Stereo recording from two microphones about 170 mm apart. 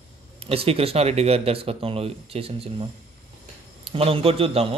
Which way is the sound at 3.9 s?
35° right (ahead or behind).